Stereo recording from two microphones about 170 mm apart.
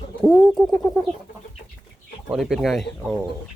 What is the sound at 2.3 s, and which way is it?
Speech, centre (ahead or behind).